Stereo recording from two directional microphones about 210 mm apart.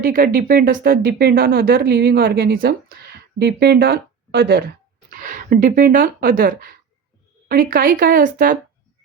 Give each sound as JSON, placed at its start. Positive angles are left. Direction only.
{"t": 0.0, "sound": "speech", "side_deg": -40}